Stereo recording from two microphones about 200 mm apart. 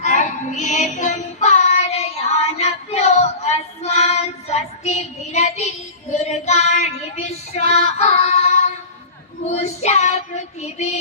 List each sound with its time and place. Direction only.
0.0 s child singing: 40° left (ahead or behind)